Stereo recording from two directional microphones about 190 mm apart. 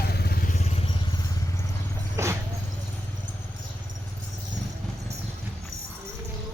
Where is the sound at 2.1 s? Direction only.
15° right (ahead or behind).